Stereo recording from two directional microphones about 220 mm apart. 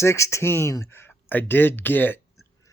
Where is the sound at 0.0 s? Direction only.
10° left (ahead or behind).